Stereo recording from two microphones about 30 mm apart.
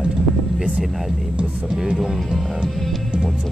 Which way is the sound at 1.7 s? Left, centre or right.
Right.